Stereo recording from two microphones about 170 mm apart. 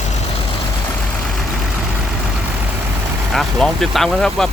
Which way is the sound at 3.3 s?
Centre (ahead or behind).